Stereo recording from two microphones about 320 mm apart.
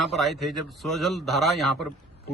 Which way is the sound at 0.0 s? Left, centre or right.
Centre.